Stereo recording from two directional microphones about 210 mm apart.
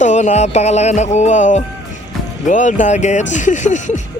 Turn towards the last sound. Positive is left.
turn(degrees=35)  # may be behind; listen again after turning